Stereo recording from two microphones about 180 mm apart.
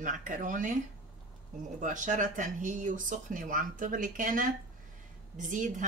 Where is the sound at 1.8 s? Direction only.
45° right (ahead or behind).